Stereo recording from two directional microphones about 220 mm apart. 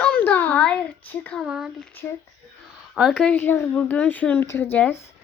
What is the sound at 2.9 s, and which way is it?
Speech, centre (ahead or behind).